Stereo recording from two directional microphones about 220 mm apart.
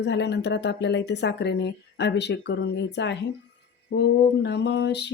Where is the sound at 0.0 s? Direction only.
50° left (ahead or behind).